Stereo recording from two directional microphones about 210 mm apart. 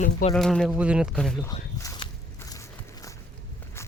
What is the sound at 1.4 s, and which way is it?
Speech, 20° left (ahead or behind).